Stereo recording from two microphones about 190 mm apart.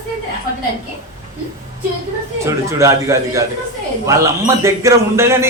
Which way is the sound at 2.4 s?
15° right (ahead or behind).